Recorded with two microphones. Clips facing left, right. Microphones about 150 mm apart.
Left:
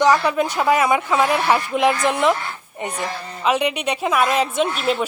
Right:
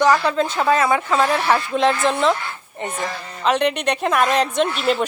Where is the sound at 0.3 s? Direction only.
15° left (ahead or behind).